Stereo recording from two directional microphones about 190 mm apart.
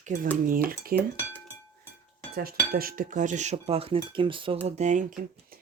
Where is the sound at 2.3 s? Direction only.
50° right (ahead or behind); by 4.6 s 25° right (ahead or behind).